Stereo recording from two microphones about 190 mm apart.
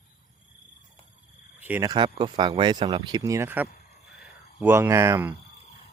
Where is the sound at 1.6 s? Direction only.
15° right (ahead or behind).